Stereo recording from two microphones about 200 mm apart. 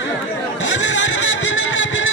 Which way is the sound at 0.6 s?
70° left (ahead or behind).